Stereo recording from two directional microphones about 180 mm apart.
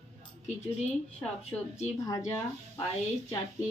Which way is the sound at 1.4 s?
35° left (ahead or behind).